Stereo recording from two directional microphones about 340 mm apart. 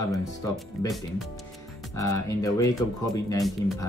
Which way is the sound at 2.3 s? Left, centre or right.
Centre.